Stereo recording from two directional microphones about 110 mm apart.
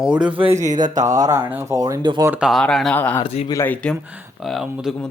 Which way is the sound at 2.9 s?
15° left (ahead or behind).